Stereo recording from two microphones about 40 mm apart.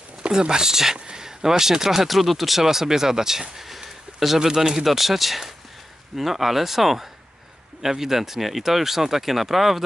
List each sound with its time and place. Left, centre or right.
0.3 s speech: centre